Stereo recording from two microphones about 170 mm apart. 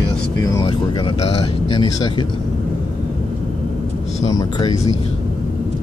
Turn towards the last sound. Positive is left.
turn(degrees=20)  # may be behind; listen again after turning